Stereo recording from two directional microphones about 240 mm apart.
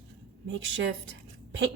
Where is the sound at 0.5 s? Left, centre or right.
Right.